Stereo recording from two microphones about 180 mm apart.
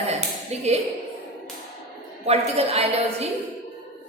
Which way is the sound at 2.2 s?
35° right (ahead or behind).